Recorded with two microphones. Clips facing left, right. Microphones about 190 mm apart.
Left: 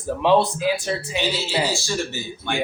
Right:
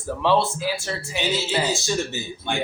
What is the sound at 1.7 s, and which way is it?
Speech, 20° right (ahead or behind).